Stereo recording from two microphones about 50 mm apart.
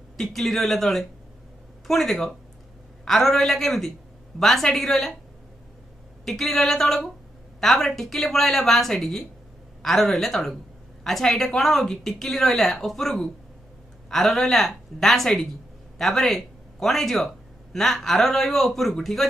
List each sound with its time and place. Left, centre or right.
0.2 s a woman's voice: centre
6.2 s a woman's voice: centre